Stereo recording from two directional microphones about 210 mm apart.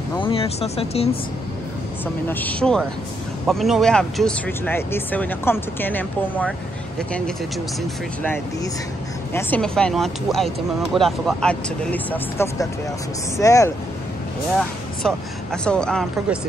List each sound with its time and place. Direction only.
0.1 s speech: 25° left (ahead or behind)
2.2 s speech: 10° left (ahead or behind)
9.3 s speech: 10° left (ahead or behind)
14.6 s speech: 5° left (ahead or behind)